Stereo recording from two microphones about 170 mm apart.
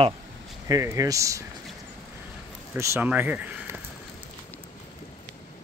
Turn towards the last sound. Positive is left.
turn(degrees=-10)  # may be behind; listen again after turning